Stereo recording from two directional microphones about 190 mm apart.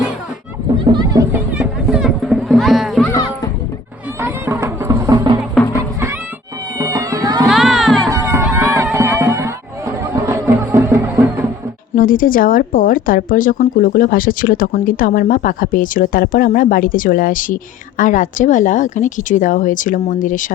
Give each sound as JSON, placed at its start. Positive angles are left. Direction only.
{"t": 0.9, "sound": "speech", "side_deg": -20}
{"t": 1.3, "sound": "music", "side_deg": -5}
{"t": 3.1, "sound": "music", "side_deg": 20}
{"t": 4.2, "sound": "music", "side_deg": -15}
{"t": 6.7, "sound": "cat", "side_deg": -20}
{"t": 7.4, "sound": "music", "side_deg": 0}
{"t": 8.1, "sound": "run", "side_deg": -15}
{"t": 8.9, "sound": "music", "side_deg": -15}
{"t": 11.9, "sound": "speech", "side_deg": 45}